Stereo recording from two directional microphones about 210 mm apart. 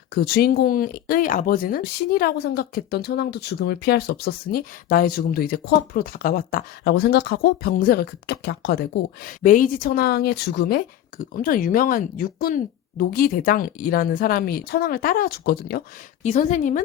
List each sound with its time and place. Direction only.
0.1 s speech: 45° left (ahead or behind)
9.4 s speech: 40° left (ahead or behind)
16.2 s a woman's voice: 35° left (ahead or behind)